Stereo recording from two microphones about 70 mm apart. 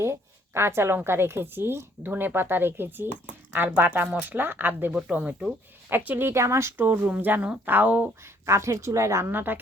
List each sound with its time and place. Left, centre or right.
0.0 s a woman's voice: right
4.9 s speech: centre
5.9 s a woman's voice: right
6.8 s speech: right
8.2 s a woman's voice: right
9.3 s speech: right